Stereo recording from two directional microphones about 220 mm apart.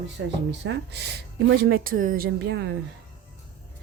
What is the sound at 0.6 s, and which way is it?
A woman's voice, 50° right (ahead or behind).